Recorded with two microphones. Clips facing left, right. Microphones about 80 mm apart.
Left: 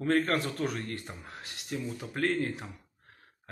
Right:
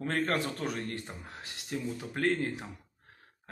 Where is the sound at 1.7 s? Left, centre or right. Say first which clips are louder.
Even; centre.